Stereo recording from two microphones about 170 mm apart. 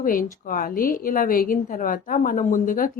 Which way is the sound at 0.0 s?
55° left (ahead or behind).